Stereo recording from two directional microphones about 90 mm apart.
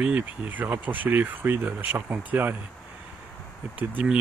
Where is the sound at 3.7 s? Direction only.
15° right (ahead or behind).